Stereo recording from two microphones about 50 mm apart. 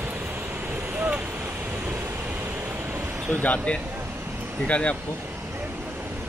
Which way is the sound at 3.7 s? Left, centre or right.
Left.